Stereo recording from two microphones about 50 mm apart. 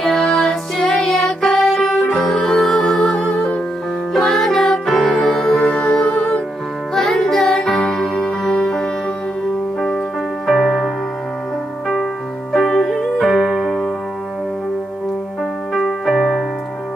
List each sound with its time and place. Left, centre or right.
0.0 s music: centre
4.1 s music: centre
7.0 s music: centre
10.5 s music: centre
12.6 s music: centre
13.3 s music: centre
15.7 s keyboard: centre